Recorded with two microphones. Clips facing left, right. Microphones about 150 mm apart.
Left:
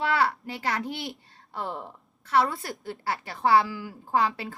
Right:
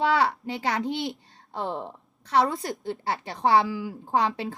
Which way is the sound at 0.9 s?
25° right (ahead or behind).